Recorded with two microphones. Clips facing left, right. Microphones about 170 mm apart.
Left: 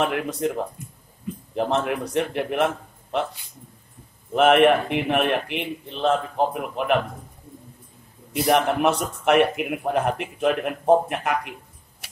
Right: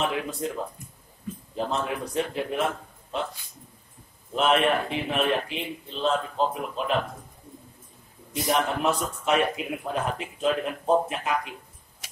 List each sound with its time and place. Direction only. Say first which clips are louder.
0.1 s a man's voice: left 4 dB; 75° left (ahead or behind)
1.5 s a man's voice: left 5 dB; 70° left (ahead or behind)
4.4 s a man's voice: left 6 dB; 70° left (ahead or behind)
8.3 s a man's voice: left 5 dB; 70° left (ahead or behind)